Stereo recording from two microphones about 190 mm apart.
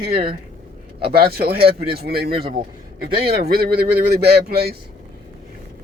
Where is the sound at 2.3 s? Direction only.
30° right (ahead or behind).